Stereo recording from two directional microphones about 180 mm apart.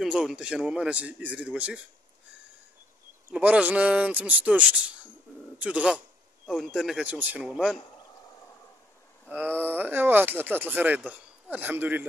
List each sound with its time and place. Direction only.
0.0 s speech: 5° right (ahead or behind)
3.3 s a man's voice: 10° right (ahead or behind)
9.3 s speech: 10° right (ahead or behind)